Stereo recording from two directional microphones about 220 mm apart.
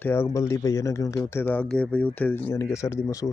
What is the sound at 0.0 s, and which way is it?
Speech, 10° left (ahead or behind).